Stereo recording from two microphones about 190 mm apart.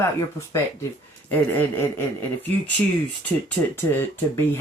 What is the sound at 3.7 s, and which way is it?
Speech, 10° left (ahead or behind).